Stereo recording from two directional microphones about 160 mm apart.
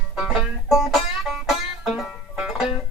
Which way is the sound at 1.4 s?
Centre (ahead or behind).